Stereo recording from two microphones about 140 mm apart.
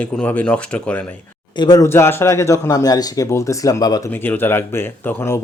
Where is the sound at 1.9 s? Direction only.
15° left (ahead or behind).